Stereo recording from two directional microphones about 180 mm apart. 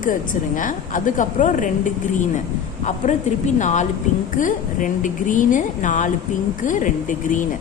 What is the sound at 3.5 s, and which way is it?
A woman's voice, 45° left (ahead or behind).